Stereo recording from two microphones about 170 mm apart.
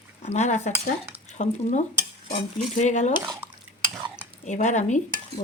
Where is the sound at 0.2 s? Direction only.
40° left (ahead or behind).